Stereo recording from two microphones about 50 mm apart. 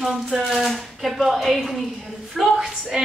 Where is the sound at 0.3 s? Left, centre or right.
Centre.